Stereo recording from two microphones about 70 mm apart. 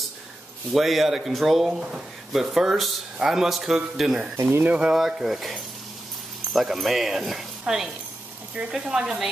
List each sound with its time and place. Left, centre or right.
0.7 s speech: centre
4.5 s speech: right
4.7 s speech: centre